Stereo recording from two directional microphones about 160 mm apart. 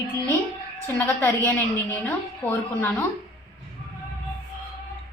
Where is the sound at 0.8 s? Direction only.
15° left (ahead or behind).